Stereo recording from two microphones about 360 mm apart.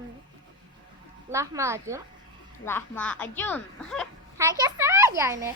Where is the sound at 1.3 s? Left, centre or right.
Centre.